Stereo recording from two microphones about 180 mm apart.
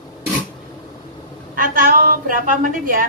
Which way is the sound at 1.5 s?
45° right (ahead or behind).